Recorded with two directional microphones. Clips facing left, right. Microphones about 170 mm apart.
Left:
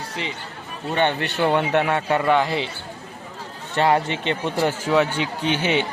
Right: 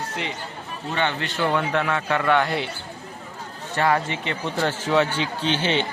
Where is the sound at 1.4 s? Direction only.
20° left (ahead or behind).